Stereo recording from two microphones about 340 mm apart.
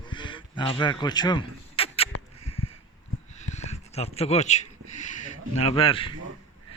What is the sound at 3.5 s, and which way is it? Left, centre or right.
Speech, centre.